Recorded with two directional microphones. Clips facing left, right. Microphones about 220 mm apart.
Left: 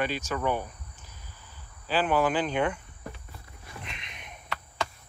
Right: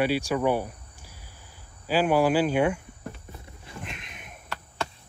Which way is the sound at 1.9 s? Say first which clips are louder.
Right 4 dB; 10° right (ahead or behind).